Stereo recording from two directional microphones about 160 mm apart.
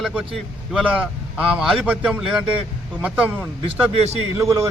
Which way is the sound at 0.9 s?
10° right (ahead or behind).